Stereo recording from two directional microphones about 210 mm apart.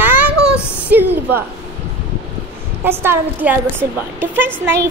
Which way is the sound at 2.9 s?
10° right (ahead or behind).